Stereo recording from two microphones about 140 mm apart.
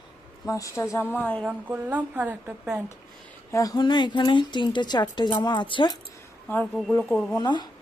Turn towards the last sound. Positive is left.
turn(degrees=30)  # may be behind; listen again after turning